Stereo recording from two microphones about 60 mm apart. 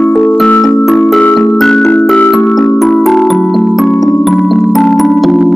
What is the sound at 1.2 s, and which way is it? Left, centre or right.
Music, centre.